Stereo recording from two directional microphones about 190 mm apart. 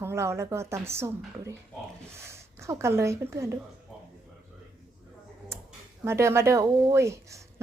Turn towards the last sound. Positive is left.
turn(degrees=-15)  # may be behind; listen again after turning